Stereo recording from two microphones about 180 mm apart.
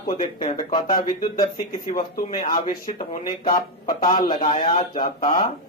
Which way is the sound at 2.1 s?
55° left (ahead or behind).